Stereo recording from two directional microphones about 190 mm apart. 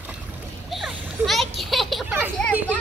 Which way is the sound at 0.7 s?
Centre (ahead or behind).